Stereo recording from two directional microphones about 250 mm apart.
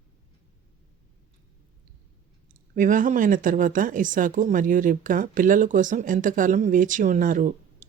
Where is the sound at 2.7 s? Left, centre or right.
Right.